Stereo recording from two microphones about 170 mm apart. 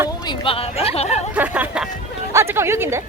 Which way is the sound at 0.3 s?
30° left (ahead or behind).